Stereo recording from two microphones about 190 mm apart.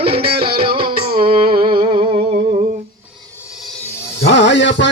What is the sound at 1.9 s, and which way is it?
Music, 25° right (ahead or behind).